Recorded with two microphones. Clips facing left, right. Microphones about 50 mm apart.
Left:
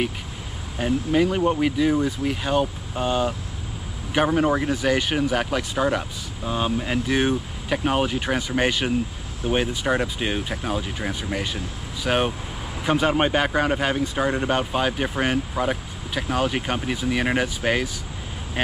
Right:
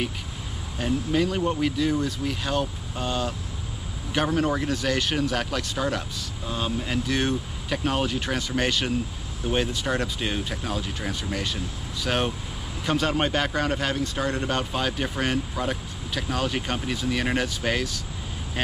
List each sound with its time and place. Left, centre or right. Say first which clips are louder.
0.7 s speech: left 3 dB; centre